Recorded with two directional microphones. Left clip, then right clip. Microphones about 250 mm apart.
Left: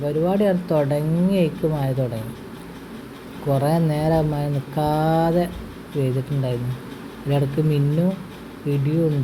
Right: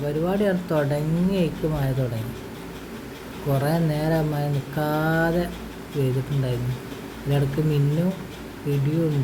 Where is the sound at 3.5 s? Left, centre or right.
Centre.